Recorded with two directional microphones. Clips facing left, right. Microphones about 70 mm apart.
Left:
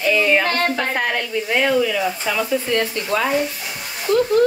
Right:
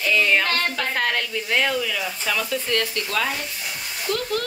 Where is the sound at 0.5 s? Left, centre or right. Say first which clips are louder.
Left 4 dB; left.